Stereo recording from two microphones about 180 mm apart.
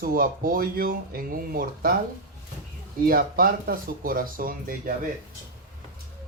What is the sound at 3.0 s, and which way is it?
Speech, 55° right (ahead or behind).